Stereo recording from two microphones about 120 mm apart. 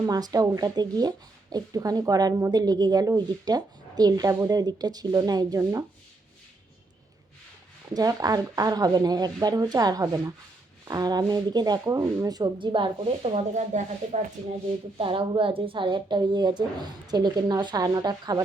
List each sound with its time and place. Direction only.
0.0 s speech: 35° right (ahead or behind)
7.9 s speech: 30° right (ahead or behind); by 13.4 s 55° right (ahead or behind)
13.5 s speech: 75° right (ahead or behind)
14.9 s speech: 45° right (ahead or behind)